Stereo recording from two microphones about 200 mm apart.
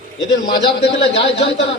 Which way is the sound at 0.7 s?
60° left (ahead or behind).